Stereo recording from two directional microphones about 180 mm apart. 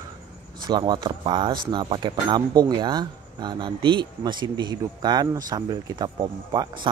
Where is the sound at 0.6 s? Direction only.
25° right (ahead or behind).